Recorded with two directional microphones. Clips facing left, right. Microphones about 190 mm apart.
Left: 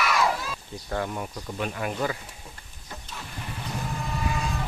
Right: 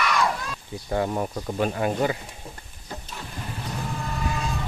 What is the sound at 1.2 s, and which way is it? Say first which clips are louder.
Speech: right 6 dB; 35° right (ahead or behind).